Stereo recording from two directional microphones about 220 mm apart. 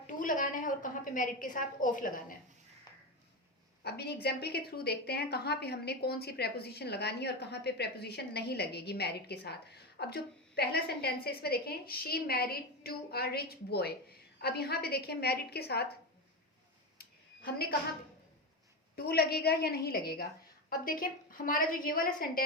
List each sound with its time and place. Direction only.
0.1 s a woman's voice: 35° left (ahead or behind)
3.8 s a woman's voice: 45° left (ahead or behind)
17.0 s a sound: 45° left (ahead or behind)
18.9 s a woman's voice: 45° left (ahead or behind)